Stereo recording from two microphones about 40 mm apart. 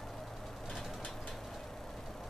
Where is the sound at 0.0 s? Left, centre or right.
Centre.